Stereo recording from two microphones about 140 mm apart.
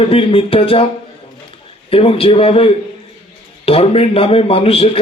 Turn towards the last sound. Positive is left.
turn(degrees=45)  # may be behind; listen again after turning